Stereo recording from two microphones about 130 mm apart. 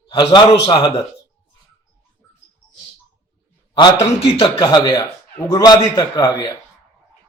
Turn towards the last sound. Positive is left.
turn(degrees=30)  # may be behind; listen again after turning